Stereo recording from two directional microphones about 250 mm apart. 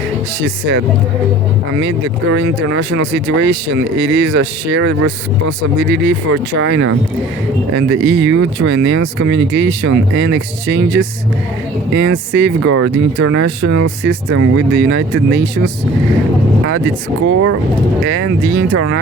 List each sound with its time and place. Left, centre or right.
2.3 s speech: right
17.2 s speech: right